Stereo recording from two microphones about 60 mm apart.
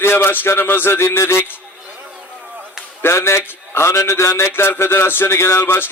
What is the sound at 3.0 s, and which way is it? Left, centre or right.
A man's voice, left.